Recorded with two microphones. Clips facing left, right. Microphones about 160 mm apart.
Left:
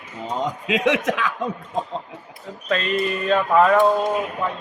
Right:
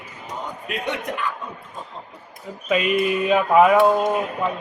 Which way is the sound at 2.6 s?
10° right (ahead or behind).